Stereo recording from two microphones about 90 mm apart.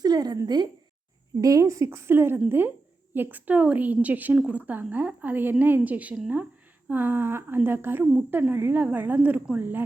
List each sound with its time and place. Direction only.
0.0 s a sound: 45° right (ahead or behind)
0.4 s a woman's voice: 50° right (ahead or behind)
1.4 s a woman's voice: 40° right (ahead or behind); by 9.8 s 20° right (ahead or behind)